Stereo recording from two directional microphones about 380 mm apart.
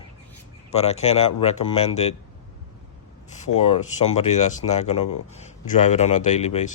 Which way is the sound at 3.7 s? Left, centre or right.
Centre.